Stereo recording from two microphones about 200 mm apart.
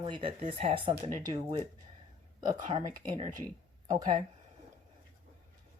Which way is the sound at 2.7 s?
25° right (ahead or behind).